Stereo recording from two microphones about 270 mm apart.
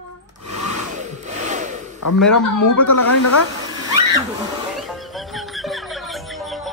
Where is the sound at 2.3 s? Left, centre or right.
Left.